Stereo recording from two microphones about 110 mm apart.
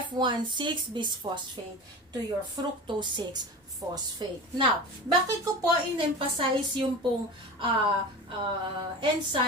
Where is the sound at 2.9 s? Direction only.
45° right (ahead or behind).